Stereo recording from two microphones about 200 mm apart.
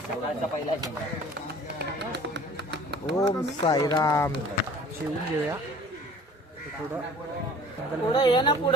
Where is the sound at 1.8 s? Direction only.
55° right (ahead or behind).